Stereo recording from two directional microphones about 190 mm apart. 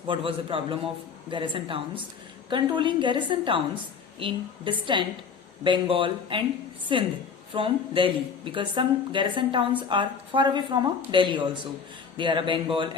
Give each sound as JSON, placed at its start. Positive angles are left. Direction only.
{"t": 0.1, "sound": "a woman's voice", "side_deg": -30}